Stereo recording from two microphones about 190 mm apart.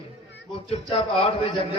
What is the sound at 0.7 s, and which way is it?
Speech, 30° left (ahead or behind).